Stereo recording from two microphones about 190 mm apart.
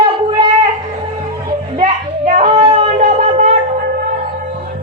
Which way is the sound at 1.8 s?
35° right (ahead or behind).